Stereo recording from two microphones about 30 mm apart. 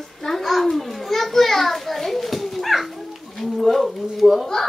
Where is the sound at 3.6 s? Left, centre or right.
Centre.